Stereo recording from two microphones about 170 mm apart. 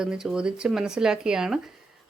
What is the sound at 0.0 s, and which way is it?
Speech, 5° right (ahead or behind).